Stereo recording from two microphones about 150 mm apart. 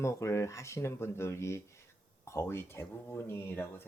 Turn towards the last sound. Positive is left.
turn(degrees=15)  # may be behind; listen again after turning